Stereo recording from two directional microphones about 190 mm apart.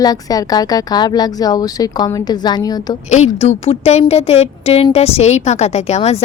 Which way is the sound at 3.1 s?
35° left (ahead or behind).